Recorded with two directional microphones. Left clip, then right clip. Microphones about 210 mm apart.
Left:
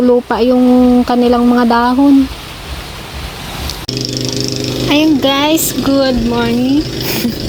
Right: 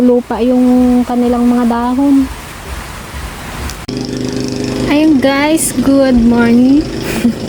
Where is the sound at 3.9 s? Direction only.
30° right (ahead or behind).